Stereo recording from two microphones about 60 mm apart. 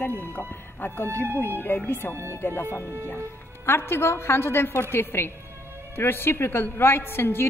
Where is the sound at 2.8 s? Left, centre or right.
Right.